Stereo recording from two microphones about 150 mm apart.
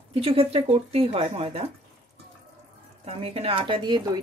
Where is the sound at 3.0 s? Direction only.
40° right (ahead or behind).